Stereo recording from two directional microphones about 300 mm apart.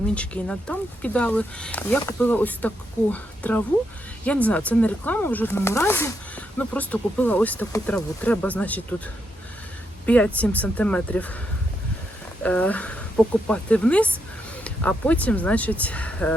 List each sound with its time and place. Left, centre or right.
0.1 s speech: centre
10.1 s speech: centre
12.4 s speech: centre